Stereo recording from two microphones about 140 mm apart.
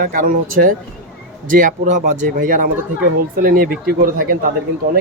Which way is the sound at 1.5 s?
70° right (ahead or behind).